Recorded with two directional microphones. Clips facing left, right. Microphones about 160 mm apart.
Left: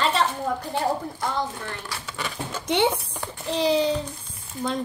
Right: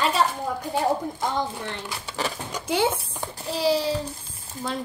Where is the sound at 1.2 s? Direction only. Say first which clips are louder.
Right 1 dB; 20° right (ahead or behind).